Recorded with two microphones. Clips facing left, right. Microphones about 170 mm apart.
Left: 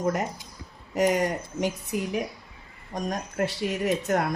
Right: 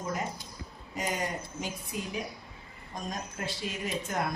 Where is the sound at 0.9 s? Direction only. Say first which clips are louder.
Left 10 dB; 70° left (ahead or behind).